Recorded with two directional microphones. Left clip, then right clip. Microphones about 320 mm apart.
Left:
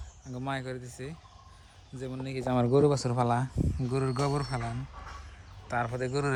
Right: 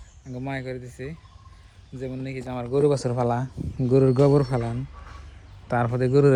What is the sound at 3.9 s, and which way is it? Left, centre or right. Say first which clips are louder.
Speech: right 13 dB; centre.